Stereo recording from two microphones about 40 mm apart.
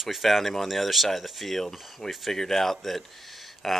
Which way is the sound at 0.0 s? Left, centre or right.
Centre.